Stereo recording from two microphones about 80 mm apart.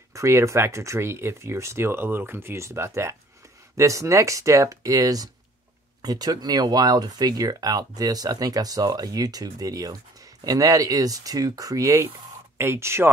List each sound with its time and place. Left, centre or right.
0.1 s speech: right
12.5 s speech: right